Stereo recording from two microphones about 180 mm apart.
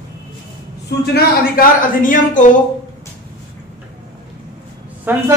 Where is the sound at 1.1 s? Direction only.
50° left (ahead or behind).